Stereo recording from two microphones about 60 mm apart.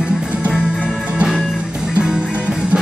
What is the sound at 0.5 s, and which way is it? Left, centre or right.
Music, left.